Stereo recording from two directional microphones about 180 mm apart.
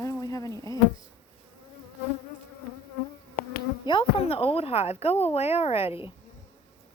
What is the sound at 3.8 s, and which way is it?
A woman's voice, 30° left (ahead or behind).